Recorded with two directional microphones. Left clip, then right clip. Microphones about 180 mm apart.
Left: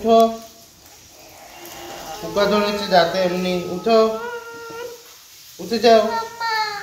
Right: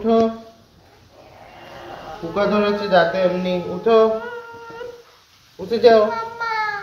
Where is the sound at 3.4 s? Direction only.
15° right (ahead or behind).